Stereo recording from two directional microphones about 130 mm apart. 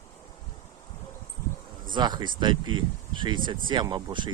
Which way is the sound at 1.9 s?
35° right (ahead or behind).